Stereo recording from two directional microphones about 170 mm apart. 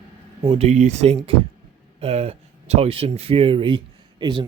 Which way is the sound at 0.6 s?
40° right (ahead or behind).